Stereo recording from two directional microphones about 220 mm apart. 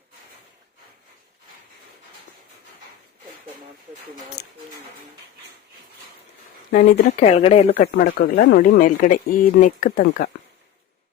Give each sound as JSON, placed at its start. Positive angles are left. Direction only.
{"t": 4.4, "sound": "speech", "side_deg": 50}
{"t": 6.7, "sound": "speech", "side_deg": 35}
{"t": 7.9, "sound": "speech", "side_deg": 40}
{"t": 8.4, "sound": "speech", "side_deg": 55}
{"t": 8.8, "sound": "speech", "side_deg": 40}